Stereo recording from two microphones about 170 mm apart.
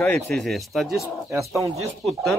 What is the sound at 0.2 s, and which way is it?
Speech, centre (ahead or behind).